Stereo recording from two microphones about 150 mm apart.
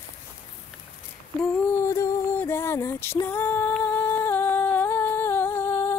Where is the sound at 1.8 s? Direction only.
20° left (ahead or behind).